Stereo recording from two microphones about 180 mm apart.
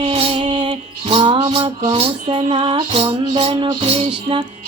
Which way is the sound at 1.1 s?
30° right (ahead or behind).